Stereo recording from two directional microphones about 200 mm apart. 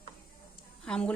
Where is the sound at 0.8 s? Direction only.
5° left (ahead or behind).